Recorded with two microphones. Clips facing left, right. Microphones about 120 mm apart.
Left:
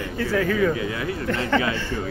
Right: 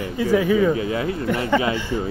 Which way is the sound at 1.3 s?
15° right (ahead or behind).